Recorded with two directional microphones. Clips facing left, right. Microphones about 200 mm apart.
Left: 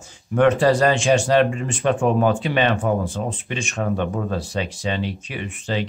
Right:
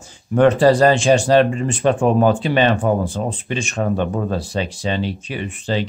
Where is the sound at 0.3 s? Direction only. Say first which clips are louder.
Right 3 dB; 35° right (ahead or behind).